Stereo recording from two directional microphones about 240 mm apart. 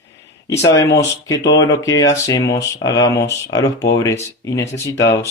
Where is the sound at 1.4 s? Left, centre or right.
Left.